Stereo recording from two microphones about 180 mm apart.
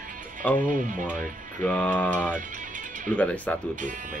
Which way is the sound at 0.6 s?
45° right (ahead or behind).